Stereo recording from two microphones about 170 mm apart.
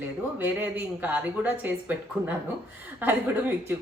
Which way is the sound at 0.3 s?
10° right (ahead or behind).